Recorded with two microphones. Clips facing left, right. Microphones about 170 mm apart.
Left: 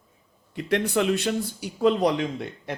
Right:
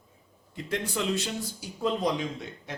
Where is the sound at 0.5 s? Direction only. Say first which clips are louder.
Left 8 dB; 70° left (ahead or behind).